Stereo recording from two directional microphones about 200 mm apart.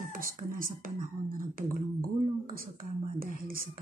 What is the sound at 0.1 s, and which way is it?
Speech, 45° right (ahead or behind).